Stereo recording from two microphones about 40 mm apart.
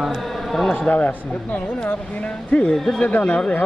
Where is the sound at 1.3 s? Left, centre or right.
Left.